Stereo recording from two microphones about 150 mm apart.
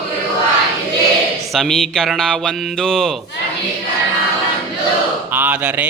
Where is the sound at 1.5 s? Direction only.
5° left (ahead or behind).